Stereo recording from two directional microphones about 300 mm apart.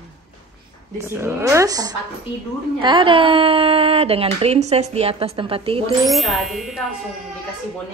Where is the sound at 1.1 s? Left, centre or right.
Centre.